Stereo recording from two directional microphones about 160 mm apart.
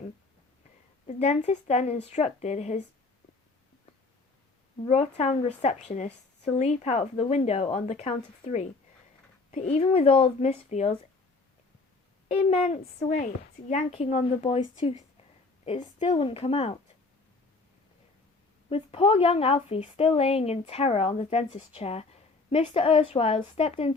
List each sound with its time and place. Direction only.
1.0 s a woman's voice: 45° left (ahead or behind)
4.9 s a woman's voice: 40° left (ahead or behind)
12.5 s a woman's voice: 40° left (ahead or behind)
18.7 s a woman's voice: 40° left (ahead or behind)